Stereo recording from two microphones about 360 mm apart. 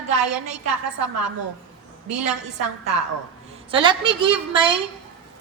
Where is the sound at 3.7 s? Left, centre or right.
Centre.